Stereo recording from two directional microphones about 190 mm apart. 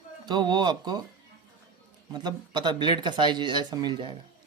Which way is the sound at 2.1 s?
20° right (ahead or behind).